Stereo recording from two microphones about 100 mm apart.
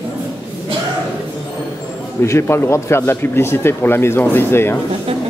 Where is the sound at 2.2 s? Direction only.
30° left (ahead or behind).